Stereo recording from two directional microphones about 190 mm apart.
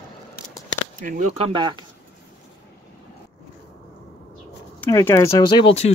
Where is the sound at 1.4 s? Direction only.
25° right (ahead or behind).